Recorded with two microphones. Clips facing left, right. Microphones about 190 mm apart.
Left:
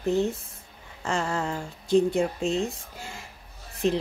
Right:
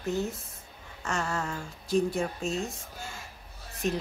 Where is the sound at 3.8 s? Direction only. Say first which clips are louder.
Left 5 dB; 30° left (ahead or behind).